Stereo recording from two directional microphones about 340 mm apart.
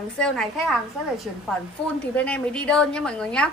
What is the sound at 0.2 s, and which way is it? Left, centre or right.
A woman's voice, centre.